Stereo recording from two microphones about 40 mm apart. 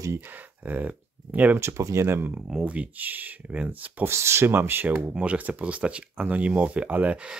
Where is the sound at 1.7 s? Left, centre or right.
Right.